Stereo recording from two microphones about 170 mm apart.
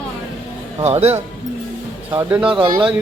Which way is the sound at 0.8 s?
40° right (ahead or behind).